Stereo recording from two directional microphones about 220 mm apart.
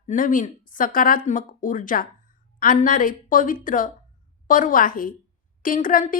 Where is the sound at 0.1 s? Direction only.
35° left (ahead or behind).